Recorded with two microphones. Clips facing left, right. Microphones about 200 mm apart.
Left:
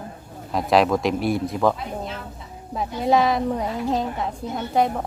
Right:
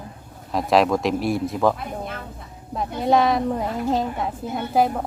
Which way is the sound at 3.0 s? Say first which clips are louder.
Right 1 dB; centre (ahead or behind).